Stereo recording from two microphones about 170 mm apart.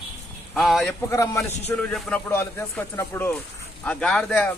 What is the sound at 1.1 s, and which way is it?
Speech, 15° left (ahead or behind).